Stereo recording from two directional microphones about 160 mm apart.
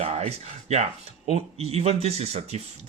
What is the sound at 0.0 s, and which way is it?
Speech, 40° right (ahead or behind).